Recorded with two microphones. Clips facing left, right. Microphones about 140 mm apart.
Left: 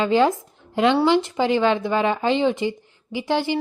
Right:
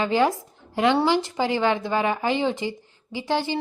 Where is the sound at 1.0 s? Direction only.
20° left (ahead or behind).